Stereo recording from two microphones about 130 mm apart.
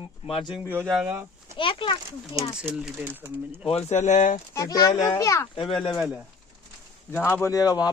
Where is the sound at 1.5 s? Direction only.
40° left (ahead or behind).